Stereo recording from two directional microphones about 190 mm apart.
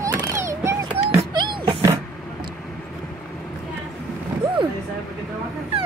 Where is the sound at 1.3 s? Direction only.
25° right (ahead or behind).